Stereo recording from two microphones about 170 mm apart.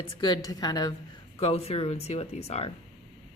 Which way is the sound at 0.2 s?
25° left (ahead or behind).